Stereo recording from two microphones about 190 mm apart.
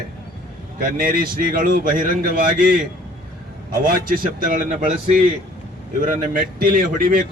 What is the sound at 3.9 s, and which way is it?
Speech, 45° right (ahead or behind).